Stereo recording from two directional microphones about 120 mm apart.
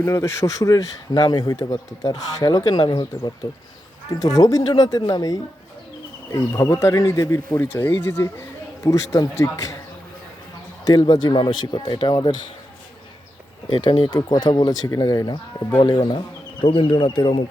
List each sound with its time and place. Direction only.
0.1 s speech: 25° left (ahead or behind)
10.8 s speech: 35° left (ahead or behind)
13.7 s speech: 45° left (ahead or behind)